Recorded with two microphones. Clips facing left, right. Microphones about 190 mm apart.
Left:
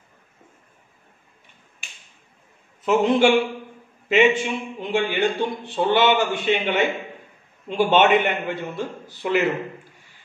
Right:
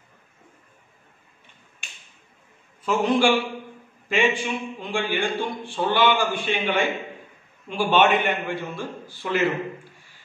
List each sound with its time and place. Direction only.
2.8 s a man's voice: 20° left (ahead or behind)